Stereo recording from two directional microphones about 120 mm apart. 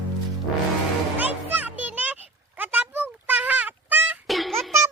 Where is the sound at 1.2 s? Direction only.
15° right (ahead or behind).